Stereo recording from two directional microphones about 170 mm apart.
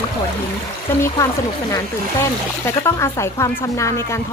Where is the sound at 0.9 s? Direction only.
15° left (ahead or behind).